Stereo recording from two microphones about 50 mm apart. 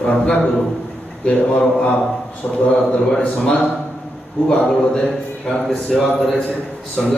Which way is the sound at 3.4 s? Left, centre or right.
Centre.